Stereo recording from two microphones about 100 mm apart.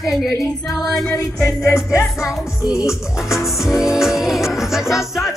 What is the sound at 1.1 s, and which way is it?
Music, 35° left (ahead or behind).